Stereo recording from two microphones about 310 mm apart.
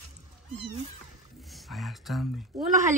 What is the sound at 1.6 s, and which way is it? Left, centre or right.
Speech, centre.